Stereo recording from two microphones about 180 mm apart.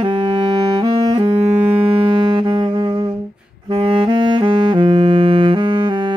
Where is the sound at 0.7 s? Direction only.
25° right (ahead or behind).